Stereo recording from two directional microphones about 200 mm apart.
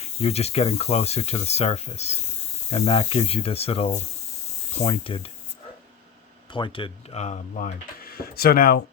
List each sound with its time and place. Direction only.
0.0 s speech: 30° left (ahead or behind)
6.5 s speech: 25° left (ahead or behind); by 8.8 s 50° left (ahead or behind)